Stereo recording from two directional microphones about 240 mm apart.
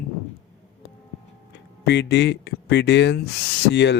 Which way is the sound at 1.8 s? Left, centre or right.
Left.